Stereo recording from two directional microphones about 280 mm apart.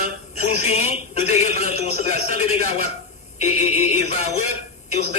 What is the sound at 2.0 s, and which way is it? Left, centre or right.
A man's voice, left.